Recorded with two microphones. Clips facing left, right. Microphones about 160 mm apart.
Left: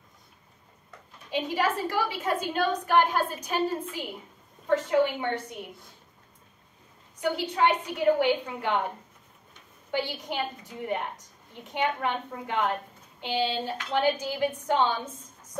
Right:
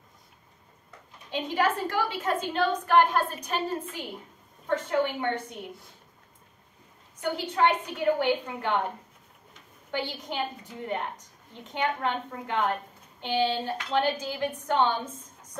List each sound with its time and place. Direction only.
1.3 s a woman's voice: 10° left (ahead or behind)
7.2 s a woman's voice: 10° left (ahead or behind)
9.8 s a woman's voice: 10° left (ahead or behind)